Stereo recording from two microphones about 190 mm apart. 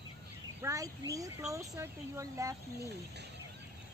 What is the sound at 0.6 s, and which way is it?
Speech, 15° right (ahead or behind).